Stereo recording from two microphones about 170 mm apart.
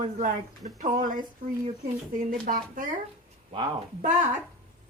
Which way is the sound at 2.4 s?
55° right (ahead or behind).